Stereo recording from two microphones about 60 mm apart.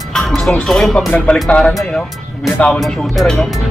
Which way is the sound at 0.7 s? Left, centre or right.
Centre.